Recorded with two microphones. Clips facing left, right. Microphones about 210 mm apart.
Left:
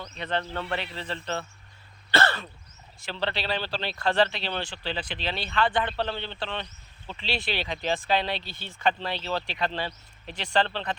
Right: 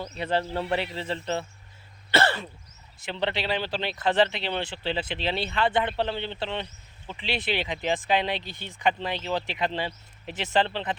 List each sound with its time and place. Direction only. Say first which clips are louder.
0.0 s speech: right 3 dB; 10° right (ahead or behind)
0.7 s speech: right 4 dB; 20° right (ahead or behind)
2.0 s throat clearing: right 2 dB; 15° right (ahead or behind)
3.0 s speech: right 2 dB; 20° right (ahead or behind)